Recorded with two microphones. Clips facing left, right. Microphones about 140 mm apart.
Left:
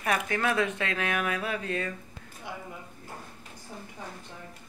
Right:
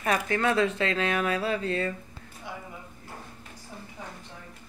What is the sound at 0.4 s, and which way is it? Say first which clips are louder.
Speech: right 4 dB; 25° right (ahead or behind).